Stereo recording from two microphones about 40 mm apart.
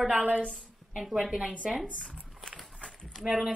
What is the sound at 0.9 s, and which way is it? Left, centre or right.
Speech, centre.